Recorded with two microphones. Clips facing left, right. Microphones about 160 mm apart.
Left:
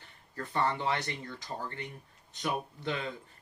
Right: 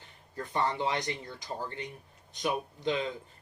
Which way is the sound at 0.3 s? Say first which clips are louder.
Right 1 dB; 15° right (ahead or behind).